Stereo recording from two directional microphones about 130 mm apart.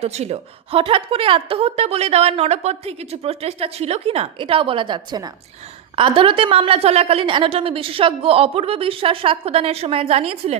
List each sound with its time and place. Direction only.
0.0 s a woman's voice: 55° right (ahead or behind)